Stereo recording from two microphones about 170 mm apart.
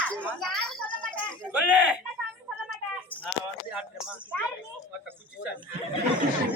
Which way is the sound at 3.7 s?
5° right (ahead or behind).